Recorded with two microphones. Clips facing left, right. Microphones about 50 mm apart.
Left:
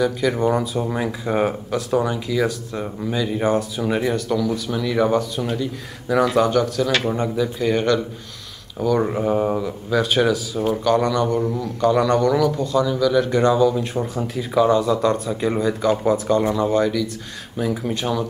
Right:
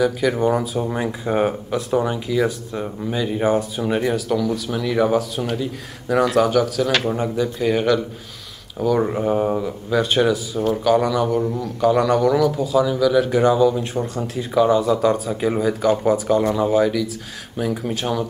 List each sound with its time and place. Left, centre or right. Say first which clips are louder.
0.0 s speech: right 1 dB; centre
13.9 s speech: even; centre